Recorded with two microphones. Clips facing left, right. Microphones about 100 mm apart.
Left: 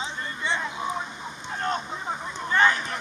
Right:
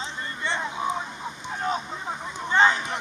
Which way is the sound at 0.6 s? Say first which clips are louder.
Right 2 dB; 20° right (ahead or behind).